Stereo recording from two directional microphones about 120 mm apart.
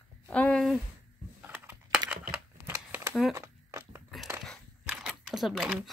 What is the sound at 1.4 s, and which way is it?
Computer keyboard, 15° right (ahead or behind).